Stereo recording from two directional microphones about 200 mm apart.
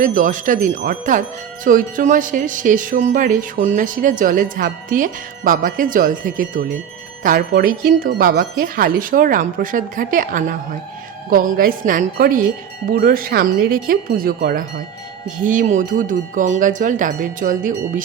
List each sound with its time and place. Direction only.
0.0 s speech: 40° right (ahead or behind)